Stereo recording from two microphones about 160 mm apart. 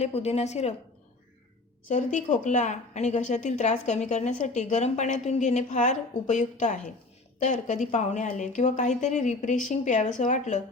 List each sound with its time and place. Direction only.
0.0 s a woman's voice: 40° left (ahead or behind)
1.9 s a woman's voice: 50° left (ahead or behind)